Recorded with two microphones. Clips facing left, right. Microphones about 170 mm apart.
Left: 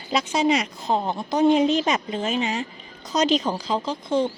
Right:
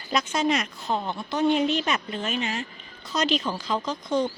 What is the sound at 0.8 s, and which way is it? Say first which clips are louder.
Speech: left 4 dB; 35° left (ahead or behind).